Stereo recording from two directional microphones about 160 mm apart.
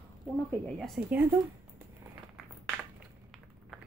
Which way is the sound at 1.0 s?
5° right (ahead or behind).